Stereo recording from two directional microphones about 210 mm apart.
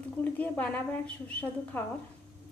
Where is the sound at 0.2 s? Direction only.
5° left (ahead or behind).